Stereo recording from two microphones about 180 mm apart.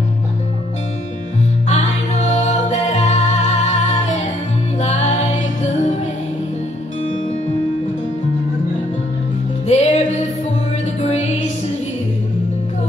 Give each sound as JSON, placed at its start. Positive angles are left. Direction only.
{"t": 1.7, "sound": "music", "side_deg": 40}
{"t": 9.7, "sound": "music", "side_deg": 40}